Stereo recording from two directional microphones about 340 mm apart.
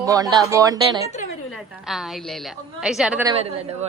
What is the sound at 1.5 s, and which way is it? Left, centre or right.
A woman's voice, centre.